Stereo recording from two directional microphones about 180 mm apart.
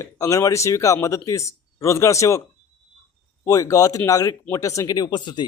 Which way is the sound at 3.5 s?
20° left (ahead or behind).